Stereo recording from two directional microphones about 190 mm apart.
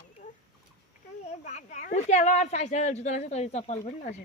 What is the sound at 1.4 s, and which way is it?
A woman's voice, 40° left (ahead or behind).